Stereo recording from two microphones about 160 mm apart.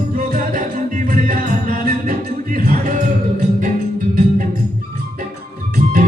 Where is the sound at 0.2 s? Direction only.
50° right (ahead or behind).